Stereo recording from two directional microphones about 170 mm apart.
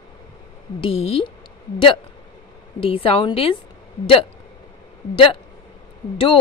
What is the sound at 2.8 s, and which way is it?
Speech, 30° left (ahead or behind).